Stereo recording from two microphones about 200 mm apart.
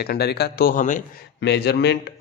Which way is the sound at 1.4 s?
55° left (ahead or behind).